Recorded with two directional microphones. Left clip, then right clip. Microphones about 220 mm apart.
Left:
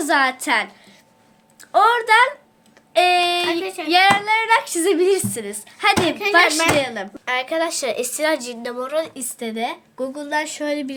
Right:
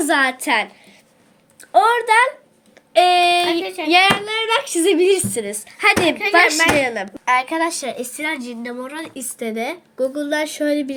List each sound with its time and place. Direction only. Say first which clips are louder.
0.0 s speech: right 1 dB; centre (ahead or behind)
1.7 s speech: right 1 dB; 5° left (ahead or behind)
8.1 s a woman's voice: left 4 dB; 35° left (ahead or behind)
8.8 s speech: left 6 dB; 20° left (ahead or behind); by 10.9 s 5° left (ahead or behind)